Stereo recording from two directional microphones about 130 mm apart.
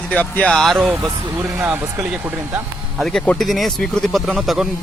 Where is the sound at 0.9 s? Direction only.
20° right (ahead or behind).